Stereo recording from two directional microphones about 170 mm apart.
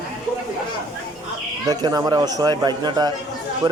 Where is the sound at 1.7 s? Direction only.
25° right (ahead or behind).